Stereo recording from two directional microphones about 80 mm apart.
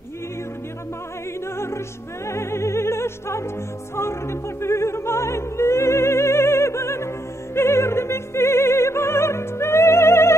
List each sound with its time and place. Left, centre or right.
2.2 s music: left
3.9 s opera: left
7.5 s music: left